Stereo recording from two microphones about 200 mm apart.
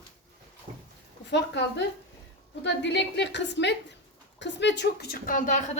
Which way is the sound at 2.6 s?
60° left (ahead or behind).